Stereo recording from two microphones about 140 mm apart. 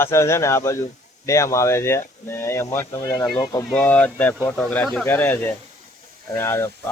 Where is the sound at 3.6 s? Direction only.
10° left (ahead or behind).